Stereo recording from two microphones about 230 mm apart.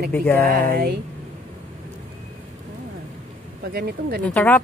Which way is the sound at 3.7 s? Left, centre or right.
Right.